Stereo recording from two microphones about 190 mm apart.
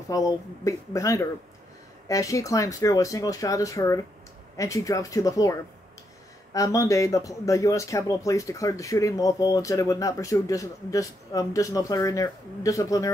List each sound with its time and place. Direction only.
0.1 s speech: 15° left (ahead or behind)